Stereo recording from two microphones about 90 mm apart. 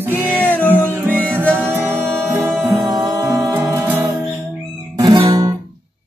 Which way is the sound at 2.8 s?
45° right (ahead or behind).